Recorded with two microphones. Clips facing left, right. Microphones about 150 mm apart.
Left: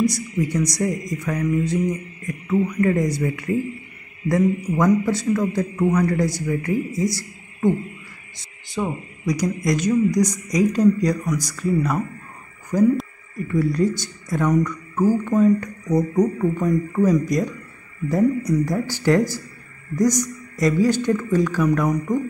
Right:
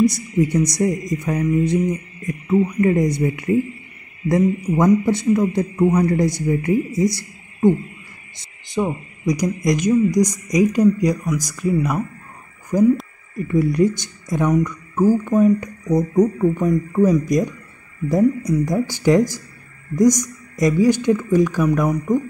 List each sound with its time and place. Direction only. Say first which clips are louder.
0.0 s speech: right 4 dB; 25° right (ahead or behind)
8.8 s speech: right 4 dB; 15° right (ahead or behind)
13.5 s speech: right 3 dB; 20° right (ahead or behind)